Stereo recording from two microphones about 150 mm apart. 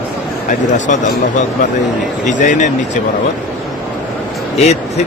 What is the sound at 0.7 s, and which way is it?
Speech, 55° left (ahead or behind).